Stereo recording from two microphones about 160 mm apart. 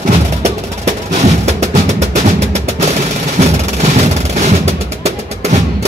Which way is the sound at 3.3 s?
45° right (ahead or behind).